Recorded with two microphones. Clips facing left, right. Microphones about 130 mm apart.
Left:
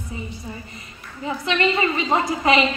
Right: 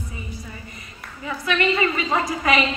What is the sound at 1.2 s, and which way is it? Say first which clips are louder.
A woman's voice: left 1 dB; 25° left (ahead or behind).